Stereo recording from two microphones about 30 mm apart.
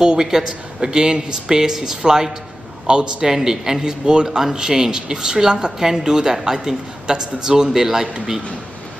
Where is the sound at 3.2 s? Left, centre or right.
Centre.